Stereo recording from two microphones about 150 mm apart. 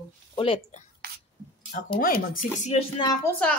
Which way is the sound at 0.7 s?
55° left (ahead or behind).